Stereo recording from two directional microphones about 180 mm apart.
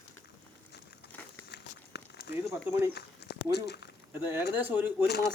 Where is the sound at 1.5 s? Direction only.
65° left (ahead or behind).